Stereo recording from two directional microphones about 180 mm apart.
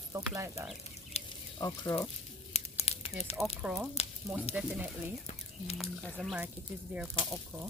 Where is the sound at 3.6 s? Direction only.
5° right (ahead or behind).